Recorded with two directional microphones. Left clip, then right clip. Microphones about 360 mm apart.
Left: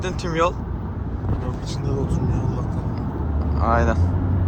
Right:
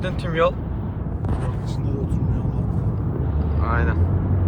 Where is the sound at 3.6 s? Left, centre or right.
Centre.